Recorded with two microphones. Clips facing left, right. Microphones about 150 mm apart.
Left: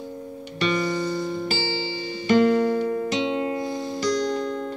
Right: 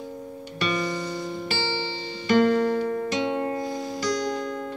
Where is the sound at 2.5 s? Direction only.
Centre (ahead or behind).